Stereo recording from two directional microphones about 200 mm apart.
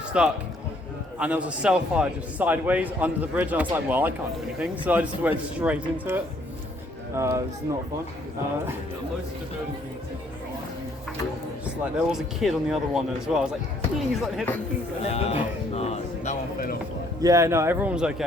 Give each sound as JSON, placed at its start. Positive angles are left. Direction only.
{"t": 0.1, "sound": "a man's voice", "side_deg": -5}
{"t": 7.2, "sound": "a man's voice", "side_deg": -15}
{"t": 11.6, "sound": "speech", "side_deg": -5}
{"t": 15.0, "sound": "speech", "side_deg": 30}
{"t": 17.2, "sound": "a man's voice", "side_deg": -15}